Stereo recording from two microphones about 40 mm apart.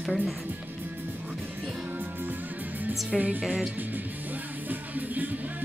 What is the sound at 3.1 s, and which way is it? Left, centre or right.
Speech, centre.